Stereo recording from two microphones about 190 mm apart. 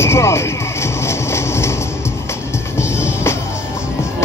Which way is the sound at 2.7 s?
15° left (ahead or behind).